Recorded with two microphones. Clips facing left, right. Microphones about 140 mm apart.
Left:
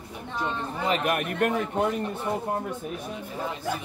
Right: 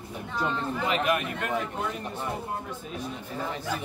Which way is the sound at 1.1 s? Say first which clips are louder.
Left 3 dB; 55° left (ahead or behind).